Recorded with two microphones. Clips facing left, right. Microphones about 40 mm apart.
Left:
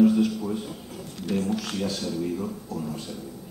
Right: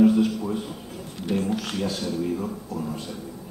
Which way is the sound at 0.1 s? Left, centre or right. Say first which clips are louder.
Right 1 dB; centre.